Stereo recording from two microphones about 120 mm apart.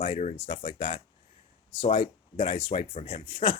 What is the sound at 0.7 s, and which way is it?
Speech, 55° left (ahead or behind).